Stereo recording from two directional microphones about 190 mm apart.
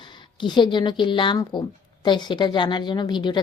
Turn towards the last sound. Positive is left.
turn(degrees=25)  # may be behind; listen again after turning